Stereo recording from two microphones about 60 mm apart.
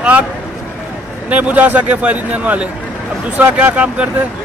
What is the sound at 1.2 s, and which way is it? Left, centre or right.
Speech, right.